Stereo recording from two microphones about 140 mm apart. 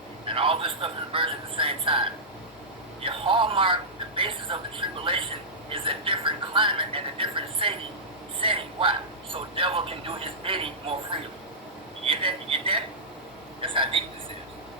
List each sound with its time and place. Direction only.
0.3 s speech: 40° right (ahead or behind)